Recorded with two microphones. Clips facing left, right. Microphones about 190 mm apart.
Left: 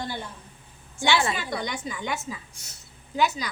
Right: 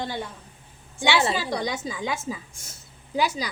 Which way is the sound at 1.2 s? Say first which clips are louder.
Right 3 dB; 35° right (ahead or behind).